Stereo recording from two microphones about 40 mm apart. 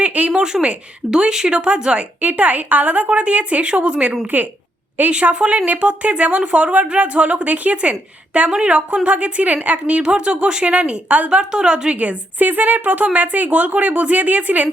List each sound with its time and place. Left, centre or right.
0.0 s a sound: right
0.3 s a woman's voice: right
11.9 s a woman's voice: right